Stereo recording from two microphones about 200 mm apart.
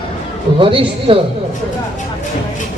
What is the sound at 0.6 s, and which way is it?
Speech, 25° right (ahead or behind).